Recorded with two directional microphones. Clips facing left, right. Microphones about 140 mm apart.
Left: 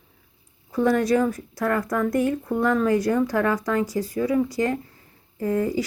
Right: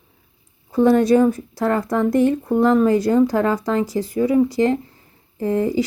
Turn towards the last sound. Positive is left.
turn(degrees=-25)  # may be behind; listen again after turning